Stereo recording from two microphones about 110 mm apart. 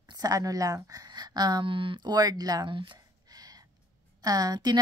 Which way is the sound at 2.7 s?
50° right (ahead or behind).